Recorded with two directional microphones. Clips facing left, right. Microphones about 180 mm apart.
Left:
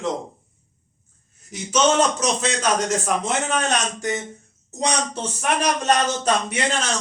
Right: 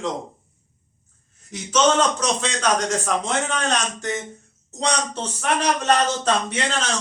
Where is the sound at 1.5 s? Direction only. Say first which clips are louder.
Even; 10° left (ahead or behind).